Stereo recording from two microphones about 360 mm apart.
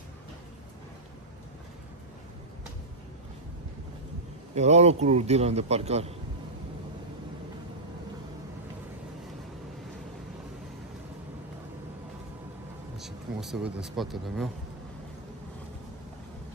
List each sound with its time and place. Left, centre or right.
4.6 s a man's voice: centre
13.0 s speech: centre